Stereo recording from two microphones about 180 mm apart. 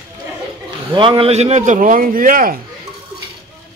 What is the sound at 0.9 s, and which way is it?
A man's voice, 30° right (ahead or behind).